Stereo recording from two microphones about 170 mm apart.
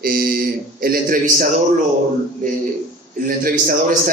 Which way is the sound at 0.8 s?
55° right (ahead or behind).